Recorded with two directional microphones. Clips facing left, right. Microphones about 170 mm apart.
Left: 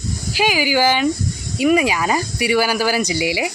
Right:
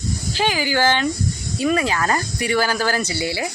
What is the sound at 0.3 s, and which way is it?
Speech, 10° left (ahead or behind).